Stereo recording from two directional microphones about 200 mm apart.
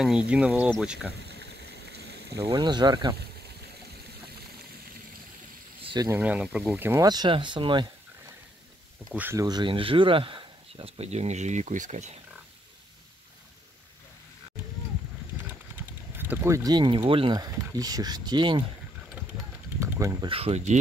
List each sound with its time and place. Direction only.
0.0 s speech: 5° right (ahead or behind)
2.3 s speech: 20° right (ahead or behind)
5.8 s a sound: 25° right (ahead or behind)
6.0 s speech: 10° right (ahead or behind)
9.1 s speech: 10° right (ahead or behind); by 12.1 s 35° right (ahead or behind)
16.2 s speech: 10° right (ahead or behind)
19.8 s a sound: 15° right (ahead or behind)
20.2 s speech: 30° right (ahead or behind)